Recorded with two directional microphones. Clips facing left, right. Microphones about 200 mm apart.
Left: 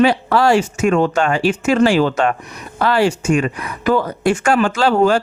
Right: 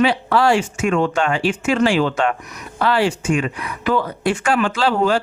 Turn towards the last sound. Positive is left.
turn(degrees=45)  # may be behind; listen again after turning